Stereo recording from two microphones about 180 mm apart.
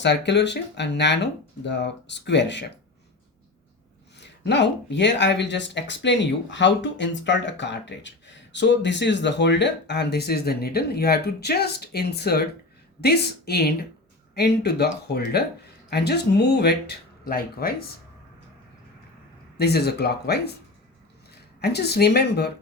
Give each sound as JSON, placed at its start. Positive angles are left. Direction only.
{"t": 0.0, "sound": "speech", "side_deg": 75}
{"t": 4.2, "sound": "speech", "side_deg": 70}
{"t": 19.5, "sound": "speech", "side_deg": 65}
{"t": 21.6, "sound": "speech", "side_deg": 65}